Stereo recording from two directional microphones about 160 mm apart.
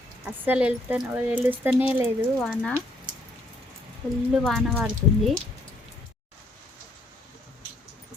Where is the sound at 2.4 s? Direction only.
5° left (ahead or behind).